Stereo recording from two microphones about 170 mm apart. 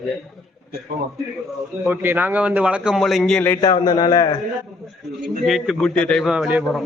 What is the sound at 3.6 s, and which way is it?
Speech, 25° left (ahead or behind).